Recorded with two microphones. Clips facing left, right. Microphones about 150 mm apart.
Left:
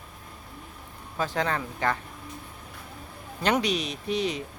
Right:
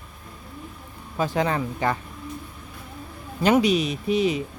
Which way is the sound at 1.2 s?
10° right (ahead or behind).